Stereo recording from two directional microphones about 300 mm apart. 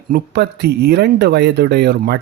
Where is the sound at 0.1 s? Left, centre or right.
Right.